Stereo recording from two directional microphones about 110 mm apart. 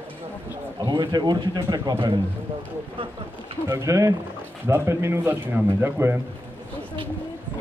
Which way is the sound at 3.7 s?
30° right (ahead or behind).